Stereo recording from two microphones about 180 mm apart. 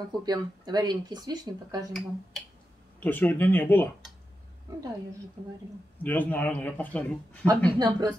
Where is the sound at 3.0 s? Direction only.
10° left (ahead or behind).